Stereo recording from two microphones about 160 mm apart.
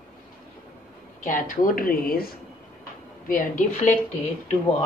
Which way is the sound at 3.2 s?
55° left (ahead or behind).